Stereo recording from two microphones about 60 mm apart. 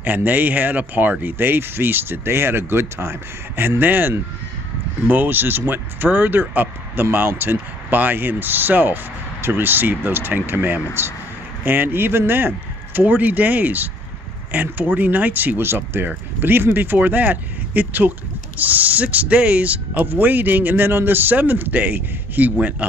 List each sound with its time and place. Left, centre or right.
0.0 s speech: right